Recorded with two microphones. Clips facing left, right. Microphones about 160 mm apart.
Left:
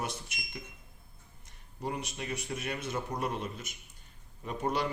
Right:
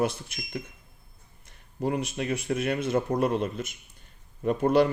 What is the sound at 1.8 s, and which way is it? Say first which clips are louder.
A man's voice: right 9 dB; 60° right (ahead or behind).